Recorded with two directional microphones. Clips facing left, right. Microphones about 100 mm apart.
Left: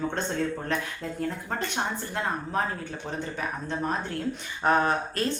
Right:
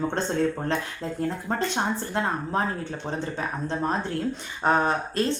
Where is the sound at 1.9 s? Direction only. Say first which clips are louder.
Right 3 dB; 30° right (ahead or behind).